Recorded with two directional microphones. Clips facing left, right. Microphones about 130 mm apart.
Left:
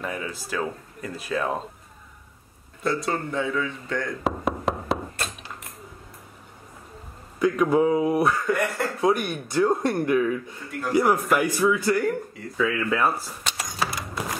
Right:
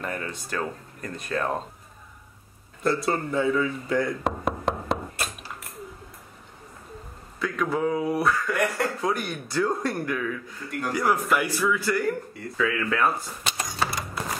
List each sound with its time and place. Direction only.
0.0 s speech: 5° left (ahead or behind)
2.8 s speech: centre (ahead or behind)
4.2 s knock: centre (ahead or behind)
5.1 s a sound: 10° right (ahead or behind)
7.3 s a man's voice: 20° left (ahead or behind)
8.5 s speech: centre (ahead or behind)
9.0 s a man's voice: 20° left (ahead or behind)
12.5 s a sound: 5° left (ahead or behind)